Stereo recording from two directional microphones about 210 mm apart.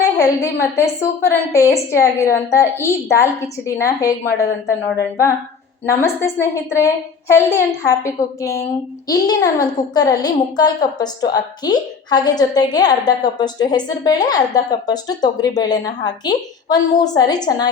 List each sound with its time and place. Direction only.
0.2 s a woman's voice: 15° left (ahead or behind)
5.8 s a woman's voice: 10° left (ahead or behind)